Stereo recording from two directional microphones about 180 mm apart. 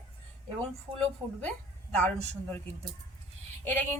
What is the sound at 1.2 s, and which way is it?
Speech, 25° right (ahead or behind).